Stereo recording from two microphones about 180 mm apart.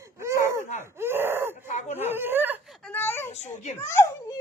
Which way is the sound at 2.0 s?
10° right (ahead or behind).